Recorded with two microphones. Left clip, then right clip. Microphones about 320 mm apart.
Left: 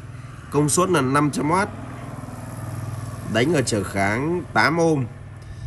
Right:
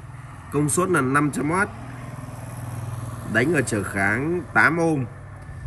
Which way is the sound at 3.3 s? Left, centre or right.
Centre.